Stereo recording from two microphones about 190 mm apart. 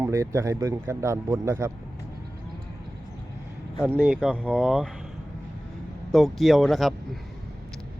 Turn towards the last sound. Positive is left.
turn(degrees=0)  # may be behind; listen again after turning